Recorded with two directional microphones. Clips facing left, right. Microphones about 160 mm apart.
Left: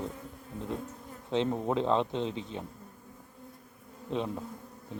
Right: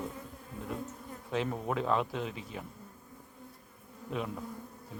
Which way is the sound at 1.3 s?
25° left (ahead or behind).